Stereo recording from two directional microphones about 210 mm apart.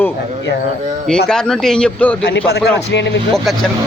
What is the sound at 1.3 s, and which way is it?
Speech, 5° left (ahead or behind).